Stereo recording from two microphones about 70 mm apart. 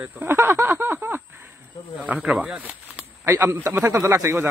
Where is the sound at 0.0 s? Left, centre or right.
Right.